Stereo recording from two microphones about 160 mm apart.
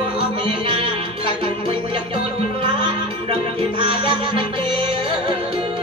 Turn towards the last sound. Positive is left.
turn(degrees=-30)  # may be behind; listen again after turning